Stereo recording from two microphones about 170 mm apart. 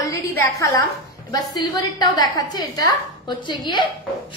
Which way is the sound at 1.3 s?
25° left (ahead or behind).